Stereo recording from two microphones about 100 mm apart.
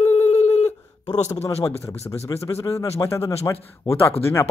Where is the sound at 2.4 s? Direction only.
30° left (ahead or behind).